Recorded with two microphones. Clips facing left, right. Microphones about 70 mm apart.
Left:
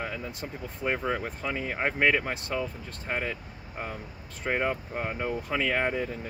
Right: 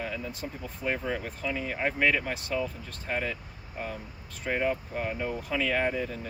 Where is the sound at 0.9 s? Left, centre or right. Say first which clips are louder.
Left 2 dB; left.